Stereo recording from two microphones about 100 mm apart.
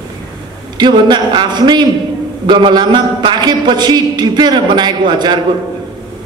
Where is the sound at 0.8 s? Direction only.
50° right (ahead or behind).